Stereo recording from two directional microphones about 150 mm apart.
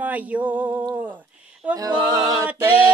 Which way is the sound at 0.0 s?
10° right (ahead or behind).